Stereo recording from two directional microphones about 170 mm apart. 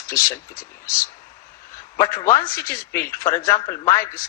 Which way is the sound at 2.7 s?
15° left (ahead or behind).